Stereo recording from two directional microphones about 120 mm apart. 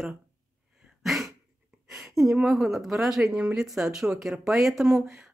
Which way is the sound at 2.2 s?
5° right (ahead or behind).